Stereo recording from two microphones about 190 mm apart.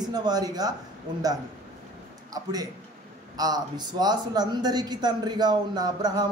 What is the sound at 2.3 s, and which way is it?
A man's voice, 20° right (ahead or behind).